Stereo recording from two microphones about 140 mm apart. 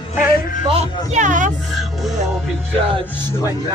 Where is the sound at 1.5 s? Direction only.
Centre (ahead or behind).